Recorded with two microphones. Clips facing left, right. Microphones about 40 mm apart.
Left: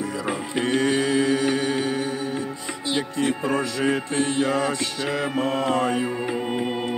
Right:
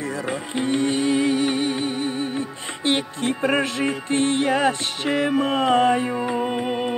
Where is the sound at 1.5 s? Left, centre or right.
Left.